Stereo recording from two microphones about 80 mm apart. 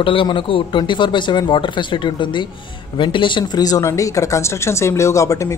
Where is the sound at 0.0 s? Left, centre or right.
Left.